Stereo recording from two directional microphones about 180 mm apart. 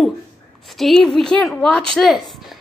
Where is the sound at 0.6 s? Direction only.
Centre (ahead or behind).